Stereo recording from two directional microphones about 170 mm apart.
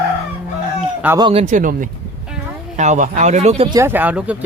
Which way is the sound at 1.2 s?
35° right (ahead or behind).